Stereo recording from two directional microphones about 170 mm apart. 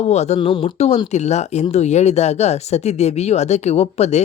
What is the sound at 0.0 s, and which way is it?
Speech, 40° left (ahead or behind).